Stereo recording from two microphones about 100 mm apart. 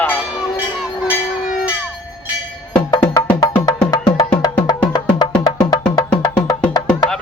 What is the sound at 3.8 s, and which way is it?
Music, 10° left (ahead or behind).